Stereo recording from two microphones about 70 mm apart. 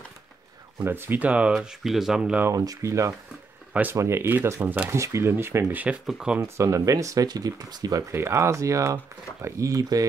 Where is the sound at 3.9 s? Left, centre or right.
Right.